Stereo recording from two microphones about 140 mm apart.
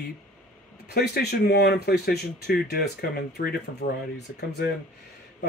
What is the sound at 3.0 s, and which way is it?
Speech, 90° left.